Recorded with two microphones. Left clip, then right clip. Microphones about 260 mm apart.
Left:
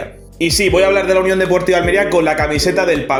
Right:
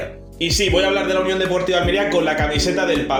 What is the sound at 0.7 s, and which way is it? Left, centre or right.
A man's voice, left.